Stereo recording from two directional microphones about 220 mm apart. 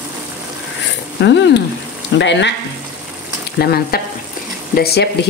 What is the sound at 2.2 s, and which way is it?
Speech, 55° left (ahead or behind).